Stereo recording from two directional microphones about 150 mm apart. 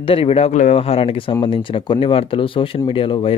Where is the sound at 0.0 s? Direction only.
35° left (ahead or behind).